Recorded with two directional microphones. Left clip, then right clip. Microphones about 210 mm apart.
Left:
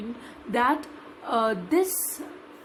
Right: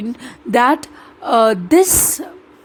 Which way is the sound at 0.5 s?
50° right (ahead or behind).